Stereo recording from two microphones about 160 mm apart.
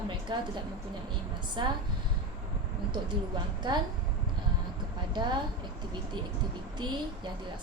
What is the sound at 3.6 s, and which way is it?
Speech, 30° right (ahead or behind).